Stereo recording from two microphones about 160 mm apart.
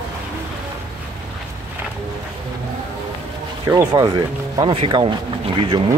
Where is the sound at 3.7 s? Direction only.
25° right (ahead or behind).